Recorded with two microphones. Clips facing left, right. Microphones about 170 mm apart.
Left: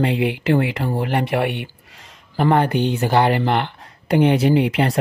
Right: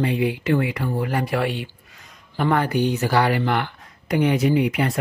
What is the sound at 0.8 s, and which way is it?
Speech, 35° left (ahead or behind).